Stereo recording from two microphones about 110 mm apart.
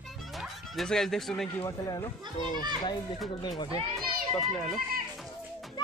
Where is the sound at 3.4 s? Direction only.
40° left (ahead or behind).